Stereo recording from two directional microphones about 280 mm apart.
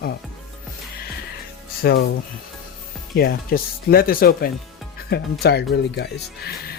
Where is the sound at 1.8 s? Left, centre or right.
Left.